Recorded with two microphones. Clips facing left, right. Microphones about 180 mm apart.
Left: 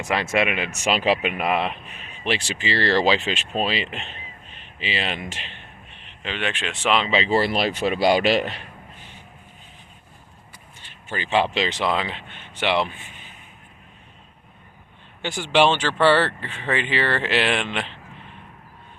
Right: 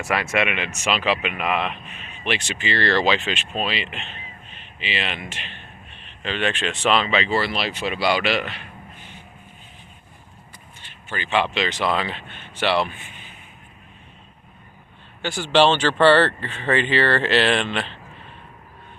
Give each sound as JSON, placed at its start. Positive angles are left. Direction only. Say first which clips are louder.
{"t": 0.0, "sound": "speech", "louder": "left 1 dB", "side_deg": 20}
{"t": 6.0, "sound": "speech", "louder": "right 3 dB", "side_deg": 15}
{"t": 7.0, "sound": "speech", "louder": "left 2 dB", "side_deg": 30}
{"t": 10.8, "sound": "speech", "louder": "left 1 dB", "side_deg": 35}
{"t": 15.2, "sound": "speech", "louder": "right 1 dB", "side_deg": 15}